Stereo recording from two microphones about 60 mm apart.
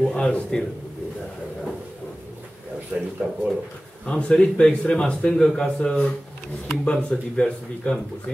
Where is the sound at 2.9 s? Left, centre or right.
Right.